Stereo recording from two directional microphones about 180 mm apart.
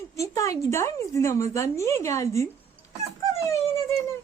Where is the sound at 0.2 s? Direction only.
15° left (ahead or behind).